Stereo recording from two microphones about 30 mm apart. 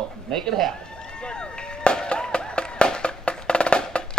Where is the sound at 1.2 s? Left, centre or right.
Left.